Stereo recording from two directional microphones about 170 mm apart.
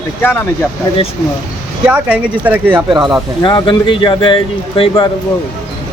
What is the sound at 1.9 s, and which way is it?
Speech, 5° right (ahead or behind).